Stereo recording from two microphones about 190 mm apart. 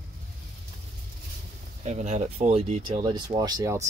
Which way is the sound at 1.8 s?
35° right (ahead or behind).